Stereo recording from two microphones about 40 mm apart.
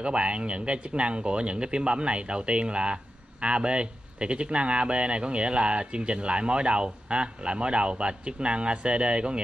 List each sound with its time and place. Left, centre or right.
0.0 s speech: right